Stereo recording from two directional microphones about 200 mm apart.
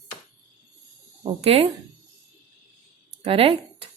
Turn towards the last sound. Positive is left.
turn(degrees=-30)  # may be behind; listen again after turning